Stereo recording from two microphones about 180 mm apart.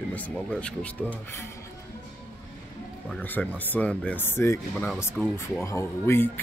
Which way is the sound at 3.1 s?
10° left (ahead or behind).